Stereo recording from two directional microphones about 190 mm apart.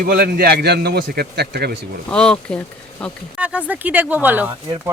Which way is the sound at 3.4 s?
5° right (ahead or behind).